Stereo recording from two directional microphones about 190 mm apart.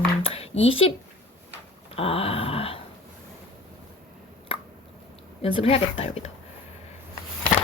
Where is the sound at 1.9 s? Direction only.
30° left (ahead or behind).